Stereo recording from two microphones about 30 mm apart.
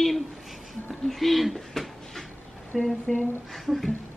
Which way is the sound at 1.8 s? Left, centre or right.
Centre.